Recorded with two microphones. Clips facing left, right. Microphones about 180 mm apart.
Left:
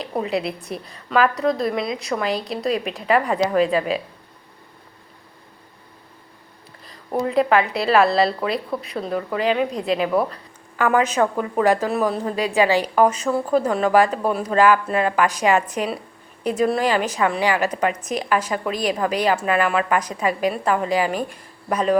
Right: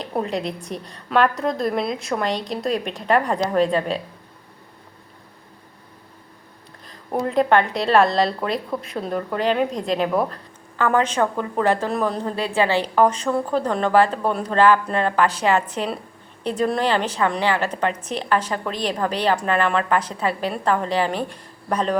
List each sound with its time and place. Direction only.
0.0 s a woman's voice: centre (ahead or behind)
6.8 s a woman's voice: 5° left (ahead or behind)